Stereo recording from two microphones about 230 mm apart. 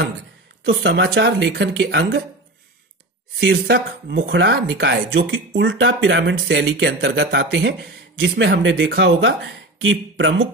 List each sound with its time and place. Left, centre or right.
0.7 s speech: right
3.3 s speech: right